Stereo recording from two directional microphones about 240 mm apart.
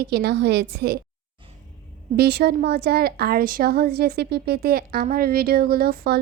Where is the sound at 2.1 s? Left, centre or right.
Right.